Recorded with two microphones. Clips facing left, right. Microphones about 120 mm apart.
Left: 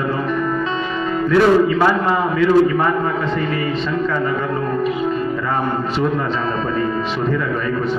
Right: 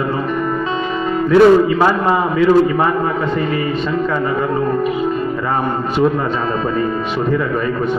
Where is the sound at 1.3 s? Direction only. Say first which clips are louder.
Right 4 dB; 35° right (ahead or behind).